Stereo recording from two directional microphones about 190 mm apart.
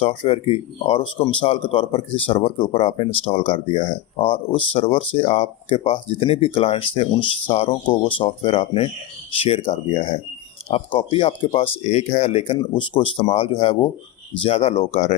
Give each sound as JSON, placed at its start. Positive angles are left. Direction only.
{"t": 0.0, "sound": "speech", "side_deg": 30}